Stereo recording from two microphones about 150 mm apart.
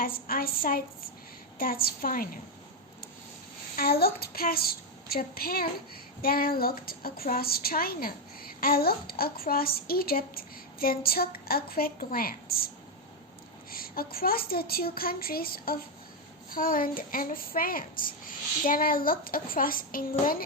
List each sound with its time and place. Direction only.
0.0 s speech: 80° left
3.8 s a child's voice: 90° left; by 20.4 s 70° left (ahead or behind)